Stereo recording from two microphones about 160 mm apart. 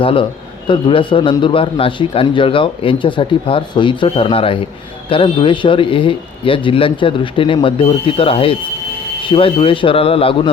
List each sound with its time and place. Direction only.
0.0 s a man's voice: 35° left (ahead or behind)